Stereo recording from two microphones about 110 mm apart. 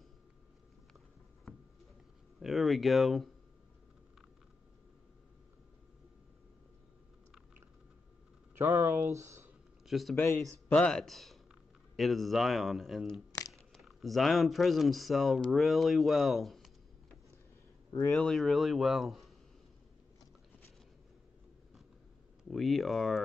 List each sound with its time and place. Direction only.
1.5 s a sound: 10° left (ahead or behind)
2.4 s a man's voice: centre (ahead or behind)
8.5 s speech: 20° right (ahead or behind)
9.8 s speech: centre (ahead or behind)
10.1 s speech: 20° left (ahead or behind)
10.7 s a man's voice: 10° left (ahead or behind)
18.1 s a man's voice: 5° left (ahead or behind)
22.4 s a man's voice: centre (ahead or behind)